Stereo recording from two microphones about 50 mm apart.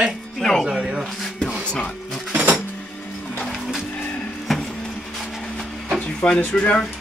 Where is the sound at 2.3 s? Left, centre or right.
Right.